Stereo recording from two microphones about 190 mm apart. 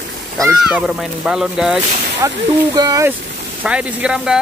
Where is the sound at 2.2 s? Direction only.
20° right (ahead or behind).